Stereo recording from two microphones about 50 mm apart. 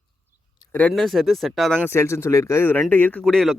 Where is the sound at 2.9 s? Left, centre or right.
Left.